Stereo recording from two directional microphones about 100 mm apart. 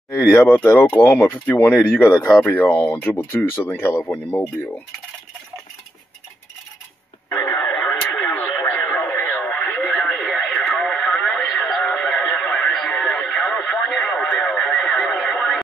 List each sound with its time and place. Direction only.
0.1 s speech: 30° left (ahead or behind)
0.4 s speech: 15° left (ahead or behind)
7.7 s radio: 15° left (ahead or behind)
10.3 s radio: centre (ahead or behind)